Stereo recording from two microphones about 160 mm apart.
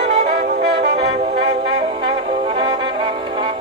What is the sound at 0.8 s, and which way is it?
Brass instrument, 45° right (ahead or behind).